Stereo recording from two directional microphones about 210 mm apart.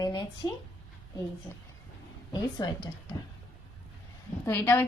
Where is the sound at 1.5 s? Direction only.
15° left (ahead or behind).